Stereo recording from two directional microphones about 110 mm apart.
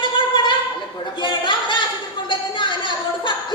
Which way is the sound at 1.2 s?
45° left (ahead or behind).